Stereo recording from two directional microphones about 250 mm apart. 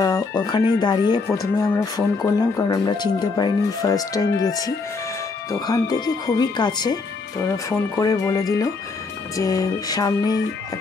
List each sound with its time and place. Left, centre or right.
0.0 s speech: centre